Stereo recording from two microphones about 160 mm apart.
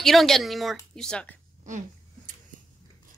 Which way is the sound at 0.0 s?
Centre (ahead or behind).